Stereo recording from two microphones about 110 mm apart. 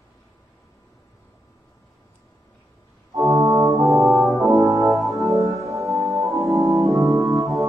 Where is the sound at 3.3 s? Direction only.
30° right (ahead or behind).